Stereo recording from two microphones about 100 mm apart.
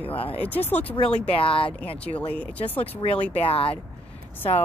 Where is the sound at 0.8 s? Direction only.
70° left (ahead or behind).